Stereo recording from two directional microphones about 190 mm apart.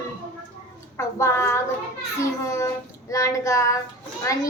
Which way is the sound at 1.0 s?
15° left (ahead or behind).